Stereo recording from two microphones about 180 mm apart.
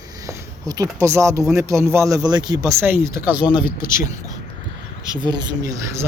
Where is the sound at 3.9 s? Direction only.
50° left (ahead or behind).